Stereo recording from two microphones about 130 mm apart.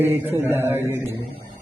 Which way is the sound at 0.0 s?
20° right (ahead or behind).